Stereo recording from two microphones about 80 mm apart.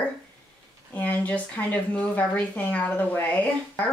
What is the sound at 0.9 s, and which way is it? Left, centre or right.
Speech, centre.